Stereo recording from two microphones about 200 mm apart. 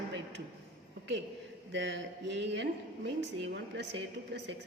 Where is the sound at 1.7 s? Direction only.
65° right (ahead or behind).